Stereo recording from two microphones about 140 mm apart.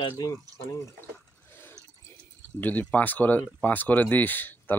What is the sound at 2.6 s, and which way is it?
Speech, 10° left (ahead or behind).